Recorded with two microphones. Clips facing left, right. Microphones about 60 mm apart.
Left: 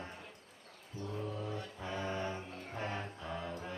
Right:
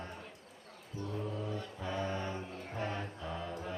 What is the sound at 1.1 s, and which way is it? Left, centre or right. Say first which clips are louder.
Mantra: right 1 dB; centre.